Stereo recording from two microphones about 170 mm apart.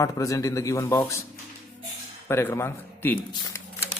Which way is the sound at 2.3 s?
15° left (ahead or behind).